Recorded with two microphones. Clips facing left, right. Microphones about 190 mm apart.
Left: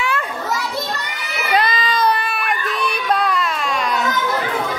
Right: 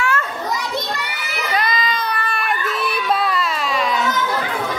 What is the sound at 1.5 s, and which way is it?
Crowd, 30° left (ahead or behind).